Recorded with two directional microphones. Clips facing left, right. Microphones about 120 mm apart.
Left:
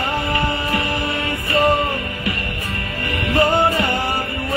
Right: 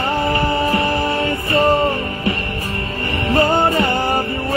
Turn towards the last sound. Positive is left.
turn(degrees=-30)  # may be behind; listen again after turning